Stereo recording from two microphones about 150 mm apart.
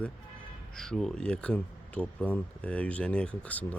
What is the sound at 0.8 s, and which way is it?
Speech, centre (ahead or behind).